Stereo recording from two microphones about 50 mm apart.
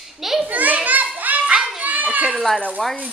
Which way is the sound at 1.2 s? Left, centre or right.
Right.